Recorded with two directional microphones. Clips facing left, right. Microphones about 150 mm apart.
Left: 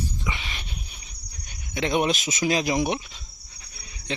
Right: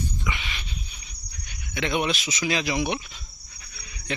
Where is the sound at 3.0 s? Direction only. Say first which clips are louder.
Even; 25° left (ahead or behind).